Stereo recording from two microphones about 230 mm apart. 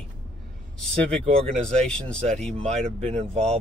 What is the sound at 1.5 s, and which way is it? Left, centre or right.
Speech, centre.